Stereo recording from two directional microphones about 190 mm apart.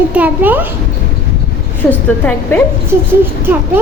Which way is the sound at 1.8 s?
10° left (ahead or behind).